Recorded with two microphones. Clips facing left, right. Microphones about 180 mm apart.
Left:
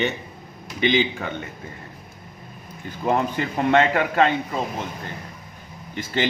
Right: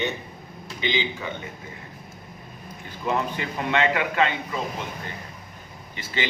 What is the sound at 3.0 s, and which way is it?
A man's voice, 50° left (ahead or behind).